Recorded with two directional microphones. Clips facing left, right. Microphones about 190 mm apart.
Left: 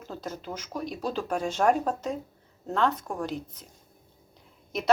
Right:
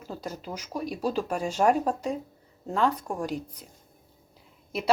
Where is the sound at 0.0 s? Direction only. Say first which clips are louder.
Even; 10° right (ahead or behind).